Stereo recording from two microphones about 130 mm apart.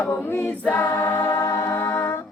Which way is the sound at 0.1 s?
15° left (ahead or behind).